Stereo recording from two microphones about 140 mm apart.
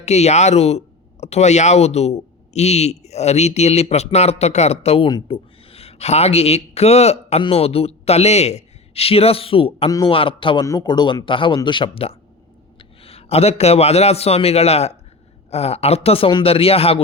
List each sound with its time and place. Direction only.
0.0 s speech: 50° left (ahead or behind)
5.0 s speech: 30° left (ahead or behind)
5.7 s a man's voice: 50° left (ahead or behind)